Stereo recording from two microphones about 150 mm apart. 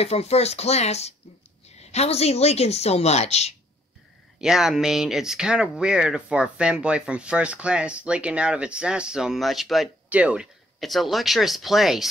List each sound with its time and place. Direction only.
0.0 s a woman's voice: 45° left (ahead or behind)
4.4 s speech: 5° right (ahead or behind)